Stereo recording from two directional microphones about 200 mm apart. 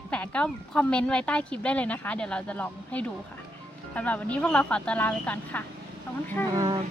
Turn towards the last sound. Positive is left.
turn(degrees=-15)  # may be behind; listen again after turning